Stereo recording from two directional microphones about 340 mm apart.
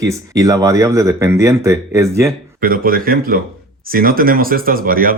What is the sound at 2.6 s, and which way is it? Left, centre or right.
A man's voice, right.